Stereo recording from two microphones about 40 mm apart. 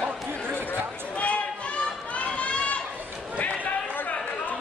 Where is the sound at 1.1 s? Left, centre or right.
Left.